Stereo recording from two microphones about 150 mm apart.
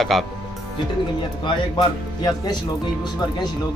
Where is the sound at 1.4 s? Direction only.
30° left (ahead or behind).